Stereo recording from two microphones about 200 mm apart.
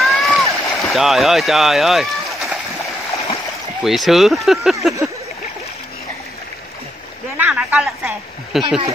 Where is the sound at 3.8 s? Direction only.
Centre (ahead or behind).